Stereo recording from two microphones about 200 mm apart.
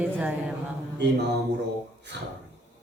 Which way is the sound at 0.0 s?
5° right (ahead or behind).